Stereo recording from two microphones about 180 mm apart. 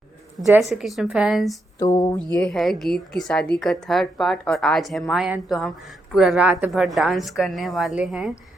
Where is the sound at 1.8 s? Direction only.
20° left (ahead or behind).